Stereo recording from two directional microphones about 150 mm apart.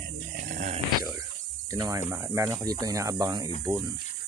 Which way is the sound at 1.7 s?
20° right (ahead or behind).